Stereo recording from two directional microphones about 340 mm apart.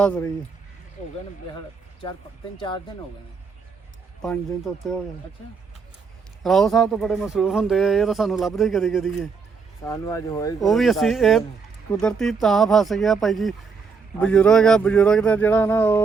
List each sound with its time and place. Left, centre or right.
0.0 s speech: centre
2.6 s speech: centre
4.2 s speech: centre
6.4 s speech: centre